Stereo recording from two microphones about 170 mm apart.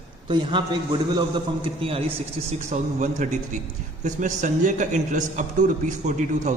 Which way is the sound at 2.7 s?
45° right (ahead or behind).